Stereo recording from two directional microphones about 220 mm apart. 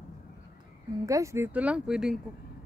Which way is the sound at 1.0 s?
15° right (ahead or behind).